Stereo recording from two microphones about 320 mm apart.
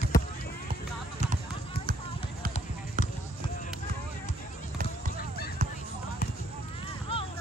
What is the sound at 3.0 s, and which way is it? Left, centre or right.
Basketball bounce, right.